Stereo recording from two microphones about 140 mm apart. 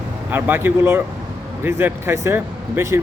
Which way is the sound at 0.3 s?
15° right (ahead or behind).